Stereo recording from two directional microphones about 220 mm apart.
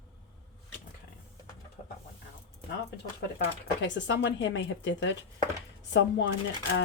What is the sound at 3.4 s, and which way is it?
Speech, 55° left (ahead or behind).